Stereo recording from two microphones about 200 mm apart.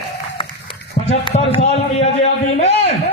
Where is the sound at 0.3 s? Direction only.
25° left (ahead or behind).